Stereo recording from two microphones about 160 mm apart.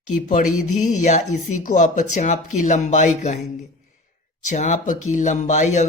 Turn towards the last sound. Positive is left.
turn(degrees=50)  # may be behind; listen again after turning